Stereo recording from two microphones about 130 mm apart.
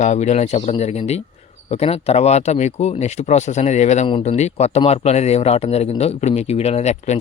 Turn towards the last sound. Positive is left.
turn(degrees=60)  # may be behind; listen again after turning